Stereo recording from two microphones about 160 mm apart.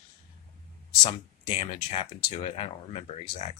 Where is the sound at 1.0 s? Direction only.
40° left (ahead or behind).